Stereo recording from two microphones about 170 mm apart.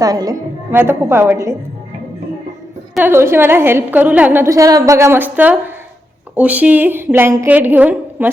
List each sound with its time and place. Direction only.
0.0 s a woman's voice: 20° right (ahead or behind)
2.9 s a woman's voice: 10° right (ahead or behind)